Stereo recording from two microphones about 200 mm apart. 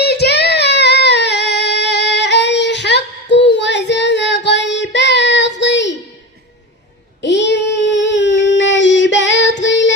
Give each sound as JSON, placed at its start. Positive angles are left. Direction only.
{"t": 0.0, "sound": "female singing", "side_deg": 55}
{"t": 7.2, "sound": "child singing", "side_deg": 60}